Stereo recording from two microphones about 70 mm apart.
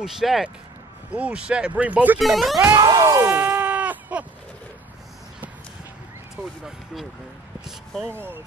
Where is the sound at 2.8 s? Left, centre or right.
Right.